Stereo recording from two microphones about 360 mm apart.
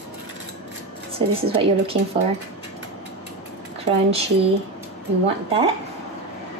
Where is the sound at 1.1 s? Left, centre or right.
Centre.